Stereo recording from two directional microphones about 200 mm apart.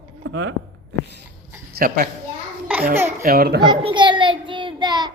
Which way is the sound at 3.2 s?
50° right (ahead or behind).